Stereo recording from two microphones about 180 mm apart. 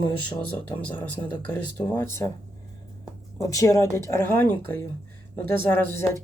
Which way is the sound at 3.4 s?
15° left (ahead or behind).